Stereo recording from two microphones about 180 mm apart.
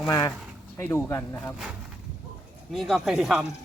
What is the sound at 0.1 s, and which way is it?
Speech, 20° left (ahead or behind).